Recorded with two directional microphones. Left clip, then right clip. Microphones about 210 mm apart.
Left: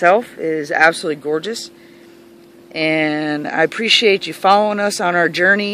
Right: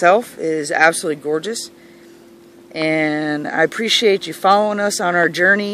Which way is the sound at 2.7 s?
Centre (ahead or behind).